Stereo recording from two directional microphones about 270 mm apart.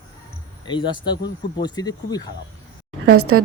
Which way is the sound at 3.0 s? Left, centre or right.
Right.